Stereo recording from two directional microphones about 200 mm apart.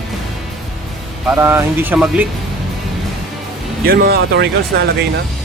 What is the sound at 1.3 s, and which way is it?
Speech, 10° right (ahead or behind).